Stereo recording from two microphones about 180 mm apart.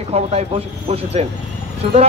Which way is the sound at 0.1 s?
35° right (ahead or behind).